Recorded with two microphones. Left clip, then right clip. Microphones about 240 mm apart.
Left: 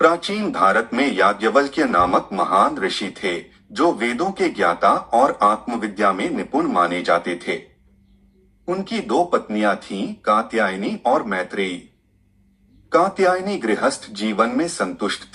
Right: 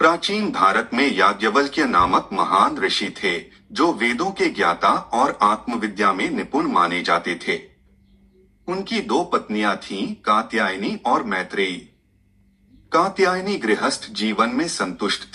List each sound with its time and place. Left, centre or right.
0.0 s speech: right
8.6 s speech: right
12.9 s speech: right